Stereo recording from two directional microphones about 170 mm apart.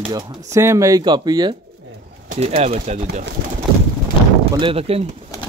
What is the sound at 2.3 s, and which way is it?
Speech, 35° right (ahead or behind).